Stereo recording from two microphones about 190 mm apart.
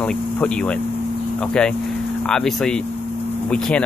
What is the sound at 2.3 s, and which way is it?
Speech, centre (ahead or behind).